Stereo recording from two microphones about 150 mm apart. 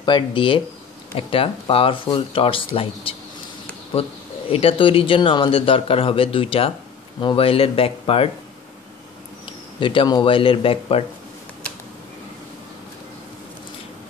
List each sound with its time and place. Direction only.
0.0 s a man's voice: 30° left (ahead or behind)
4.5 s a man's voice: 40° left (ahead or behind)
9.8 s a man's voice: 35° left (ahead or behind)